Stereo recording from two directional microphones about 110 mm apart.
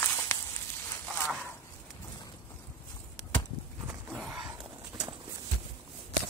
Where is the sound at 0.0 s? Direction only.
30° left (ahead or behind).